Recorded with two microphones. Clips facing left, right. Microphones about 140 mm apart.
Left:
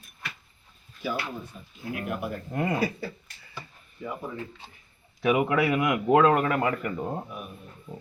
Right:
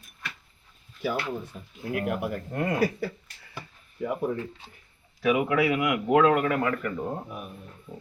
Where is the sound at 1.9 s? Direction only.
75° right (ahead or behind).